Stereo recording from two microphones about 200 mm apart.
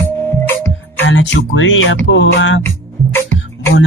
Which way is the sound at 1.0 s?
65° left (ahead or behind).